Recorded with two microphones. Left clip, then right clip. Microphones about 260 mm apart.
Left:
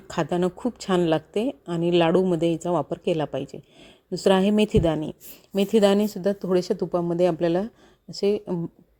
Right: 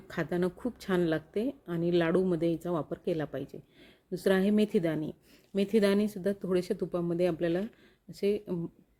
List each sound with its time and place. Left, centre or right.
0.1 s a woman's voice: centre